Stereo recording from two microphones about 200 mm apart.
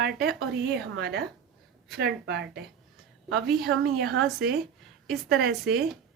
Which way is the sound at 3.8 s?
50° right (ahead or behind).